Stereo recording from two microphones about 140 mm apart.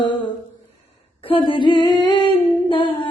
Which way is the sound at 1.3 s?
40° left (ahead or behind).